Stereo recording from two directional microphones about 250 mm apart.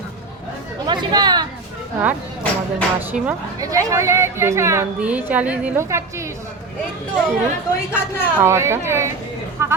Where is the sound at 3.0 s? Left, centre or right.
Centre.